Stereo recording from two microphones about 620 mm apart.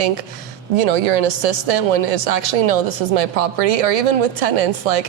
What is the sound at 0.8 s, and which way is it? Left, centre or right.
Speech, right.